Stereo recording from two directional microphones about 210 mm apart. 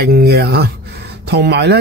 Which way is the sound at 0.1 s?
50° right (ahead or behind).